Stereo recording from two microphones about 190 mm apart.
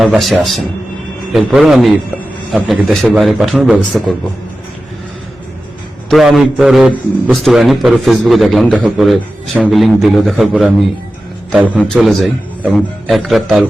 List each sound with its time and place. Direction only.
0.0 s a man's voice: centre (ahead or behind)
6.1 s a man's voice: centre (ahead or behind)